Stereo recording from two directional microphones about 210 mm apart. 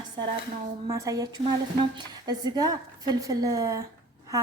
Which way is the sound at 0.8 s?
15° right (ahead or behind).